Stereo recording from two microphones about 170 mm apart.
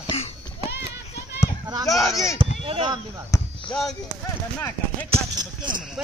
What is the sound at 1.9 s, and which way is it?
Speech, centre (ahead or behind).